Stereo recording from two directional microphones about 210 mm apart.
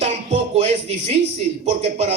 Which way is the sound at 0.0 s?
30° right (ahead or behind).